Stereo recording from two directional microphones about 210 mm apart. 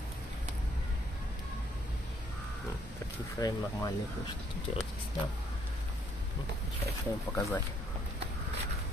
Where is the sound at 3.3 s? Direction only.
15° left (ahead or behind).